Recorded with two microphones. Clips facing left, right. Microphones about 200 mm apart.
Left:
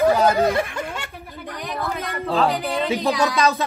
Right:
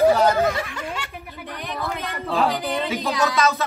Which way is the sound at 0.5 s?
50° left (ahead or behind).